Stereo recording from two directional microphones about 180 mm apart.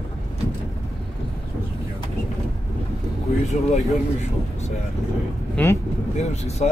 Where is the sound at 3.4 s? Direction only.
40° left (ahead or behind).